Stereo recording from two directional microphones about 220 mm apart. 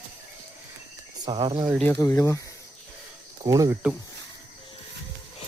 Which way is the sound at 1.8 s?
10° left (ahead or behind).